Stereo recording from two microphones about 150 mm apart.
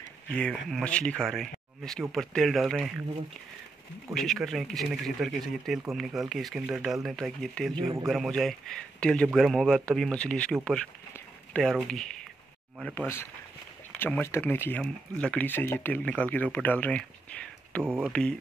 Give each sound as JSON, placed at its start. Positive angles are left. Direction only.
{"t": 0.3, "sound": "speech", "side_deg": 5}
{"t": 4.1, "sound": "speech", "side_deg": 0}
{"t": 12.9, "sound": "speech", "side_deg": 15}
{"t": 17.8, "sound": "speech", "side_deg": -10}